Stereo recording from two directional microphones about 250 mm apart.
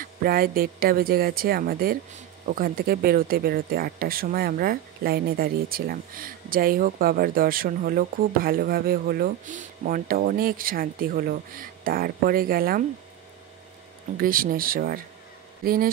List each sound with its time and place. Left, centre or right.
0.0 s speech: right
14.1 s speech: right